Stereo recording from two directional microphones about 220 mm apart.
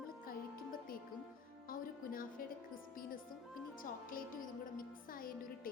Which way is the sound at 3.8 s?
40° left (ahead or behind).